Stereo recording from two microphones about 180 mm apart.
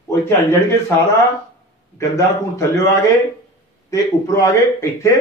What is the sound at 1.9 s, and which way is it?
Speech, 15° left (ahead or behind).